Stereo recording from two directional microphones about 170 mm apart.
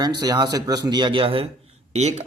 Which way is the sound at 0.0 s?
25° right (ahead or behind).